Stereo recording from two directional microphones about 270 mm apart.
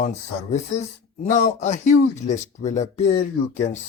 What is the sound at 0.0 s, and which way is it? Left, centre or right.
Speech, left.